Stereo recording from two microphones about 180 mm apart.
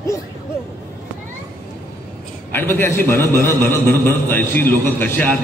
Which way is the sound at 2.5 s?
10° left (ahead or behind).